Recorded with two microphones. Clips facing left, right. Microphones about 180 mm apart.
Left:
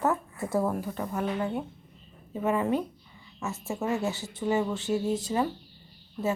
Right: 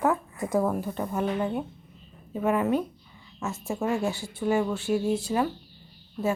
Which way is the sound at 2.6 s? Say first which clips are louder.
Right 2 dB; 20° left (ahead or behind).